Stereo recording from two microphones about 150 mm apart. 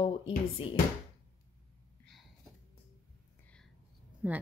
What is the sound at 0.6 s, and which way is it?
Speech, 35° left (ahead or behind).